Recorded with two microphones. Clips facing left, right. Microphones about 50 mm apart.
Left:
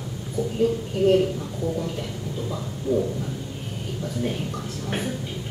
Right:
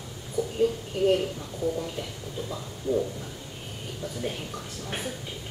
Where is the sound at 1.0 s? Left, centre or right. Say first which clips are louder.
Left 3 dB; centre.